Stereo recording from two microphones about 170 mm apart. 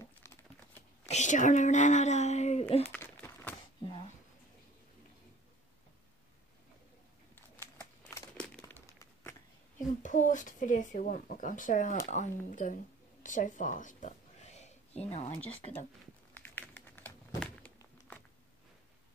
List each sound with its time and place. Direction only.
0.0 s crumpling: 15° left (ahead or behind)
1.0 s speech: 45° left (ahead or behind)
2.8 s crumpling: 10° left (ahead or behind)
7.3 s crumpling: 10° left (ahead or behind)
10.0 s speech: 45° left (ahead or behind)
16.3 s crumpling: 10° left (ahead or behind)